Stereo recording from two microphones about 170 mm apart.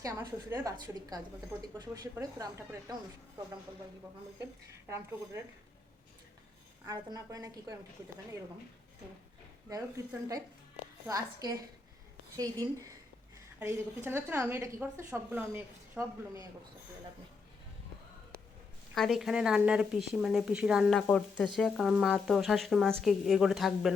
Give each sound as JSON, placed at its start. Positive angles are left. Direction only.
{"t": 0.0, "sound": "speech", "side_deg": -15}
{"t": 1.8, "sound": "speech", "side_deg": -20}
{"t": 6.8, "sound": "speech", "side_deg": -20}
{"t": 10.1, "sound": "a woman's voice", "side_deg": -20}
{"t": 18.9, "sound": "speech", "side_deg": 0}